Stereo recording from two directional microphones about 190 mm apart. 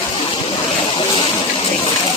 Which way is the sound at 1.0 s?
30° left (ahead or behind).